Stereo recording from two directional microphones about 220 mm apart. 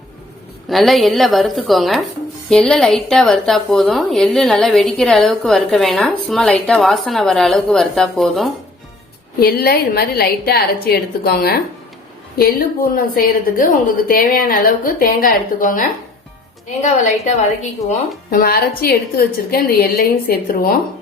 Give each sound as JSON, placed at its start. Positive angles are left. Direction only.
{"t": 0.7, "sound": "a woman's voice", "side_deg": 0}
{"t": 9.4, "sound": "a woman's voice", "side_deg": 45}
{"t": 16.8, "sound": "a woman's voice", "side_deg": 30}